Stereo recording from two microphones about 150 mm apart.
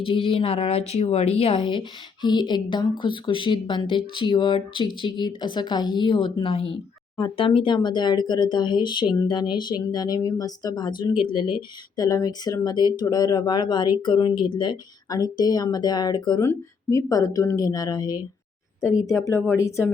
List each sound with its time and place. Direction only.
0.0 s speech: 35° left (ahead or behind); by 19.9 s 20° left (ahead or behind)